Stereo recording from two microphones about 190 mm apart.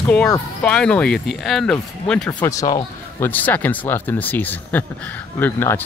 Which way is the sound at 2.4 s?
15° left (ahead or behind).